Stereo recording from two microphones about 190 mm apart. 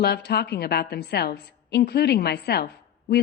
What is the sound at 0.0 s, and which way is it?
A woman's voice, 60° left (ahead or behind).